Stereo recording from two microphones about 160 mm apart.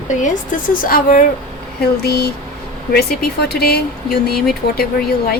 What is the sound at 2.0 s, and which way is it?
Speech, 80° left.